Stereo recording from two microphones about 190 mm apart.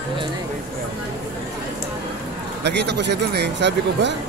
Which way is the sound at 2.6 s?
60° right (ahead or behind).